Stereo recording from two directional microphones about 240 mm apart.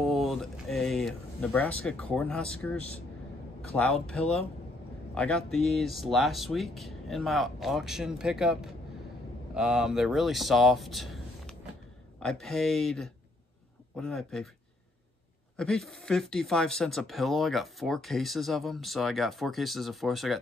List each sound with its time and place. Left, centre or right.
0.0 s speech: centre
15.5 s speech: centre